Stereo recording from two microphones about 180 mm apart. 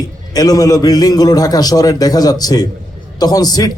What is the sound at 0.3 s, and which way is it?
A man's voice, 20° left (ahead or behind).